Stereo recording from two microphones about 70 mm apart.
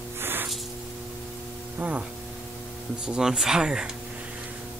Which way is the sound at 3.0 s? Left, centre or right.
Centre.